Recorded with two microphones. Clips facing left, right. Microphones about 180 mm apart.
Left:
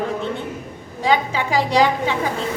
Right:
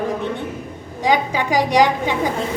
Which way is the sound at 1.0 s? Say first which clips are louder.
Right 1 dB; 15° right (ahead or behind).